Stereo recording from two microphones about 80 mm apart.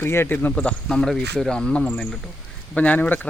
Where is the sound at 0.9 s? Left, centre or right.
Centre.